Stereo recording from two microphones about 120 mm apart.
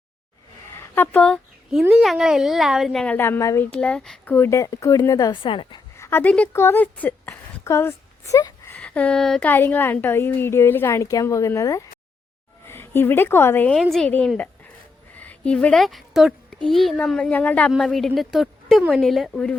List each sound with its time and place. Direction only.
0.8 s speech: 20° left (ahead or behind)
2.0 s a woman's voice: centre (ahead or behind)
3.0 s a woman's voice: 15° left (ahead or behind)
3.7 s speech: 10° left (ahead or behind)
4.3 s a woman's voice: 20° left (ahead or behind)
5.4 s a woman's voice: 45° left (ahead or behind)
6.0 s a woman's voice: 20° left (ahead or behind)
8.8 s speech: 10° left (ahead or behind)
9.5 s a woman's voice: 15° left (ahead or behind)
15.2 s a woman's voice: 10° left (ahead or behind)
17.7 s a woman's voice: centre (ahead or behind)